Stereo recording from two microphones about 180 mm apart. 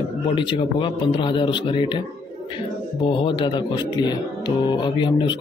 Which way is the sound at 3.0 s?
25° left (ahead or behind).